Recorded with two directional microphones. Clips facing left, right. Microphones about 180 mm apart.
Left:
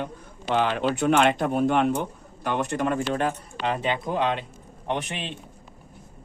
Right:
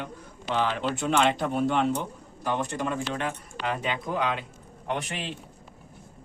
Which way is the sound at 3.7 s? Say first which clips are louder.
Left 4 dB; 30° left (ahead or behind).